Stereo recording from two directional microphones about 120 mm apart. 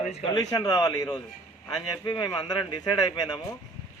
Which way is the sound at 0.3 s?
30° left (ahead or behind).